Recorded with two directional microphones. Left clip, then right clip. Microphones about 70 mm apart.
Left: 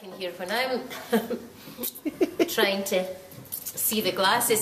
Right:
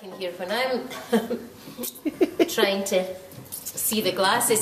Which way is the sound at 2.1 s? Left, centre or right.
Centre.